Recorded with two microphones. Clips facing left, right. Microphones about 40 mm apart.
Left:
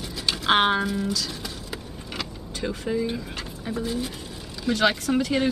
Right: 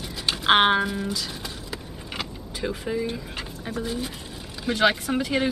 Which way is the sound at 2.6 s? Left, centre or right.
Centre.